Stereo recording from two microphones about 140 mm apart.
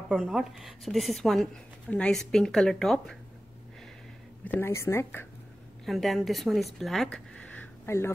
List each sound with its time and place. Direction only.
0.1 s a woman's voice: 5° right (ahead or behind)
4.5 s speech: 15° left (ahead or behind)
5.9 s speech: centre (ahead or behind); by 8.1 s 15° left (ahead or behind)